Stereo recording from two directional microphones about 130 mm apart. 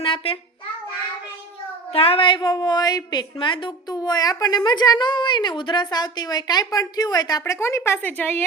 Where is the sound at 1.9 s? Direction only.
50° left (ahead or behind).